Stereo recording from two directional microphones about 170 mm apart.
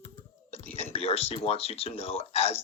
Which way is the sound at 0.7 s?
35° left (ahead or behind).